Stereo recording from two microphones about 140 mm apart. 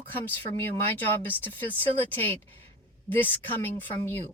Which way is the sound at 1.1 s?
15° left (ahead or behind).